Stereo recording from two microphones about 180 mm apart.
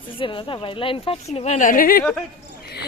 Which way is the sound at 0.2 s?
30° left (ahead or behind).